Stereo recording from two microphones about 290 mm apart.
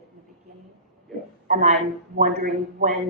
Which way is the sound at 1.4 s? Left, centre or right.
Right.